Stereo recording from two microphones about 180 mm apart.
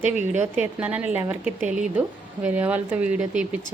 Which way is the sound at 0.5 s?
10° right (ahead or behind).